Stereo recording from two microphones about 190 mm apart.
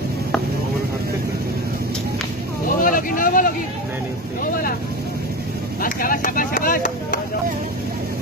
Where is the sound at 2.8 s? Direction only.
45° left (ahead or behind).